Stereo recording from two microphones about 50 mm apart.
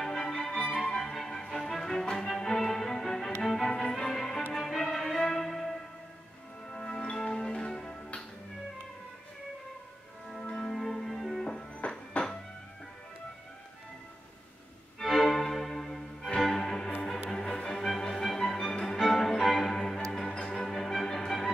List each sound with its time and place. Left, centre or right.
0.0 s music: centre
10.4 s music: centre
11.4 s music: centre
15.0 s music: centre